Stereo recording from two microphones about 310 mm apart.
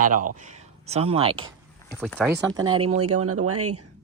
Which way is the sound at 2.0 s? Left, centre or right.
Centre.